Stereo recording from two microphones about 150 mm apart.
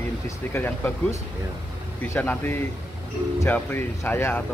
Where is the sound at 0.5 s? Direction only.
15° left (ahead or behind).